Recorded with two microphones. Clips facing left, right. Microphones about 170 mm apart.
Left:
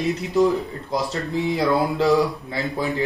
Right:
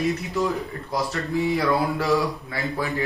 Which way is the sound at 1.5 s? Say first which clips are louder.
Left 4 dB; 20° left (ahead or behind).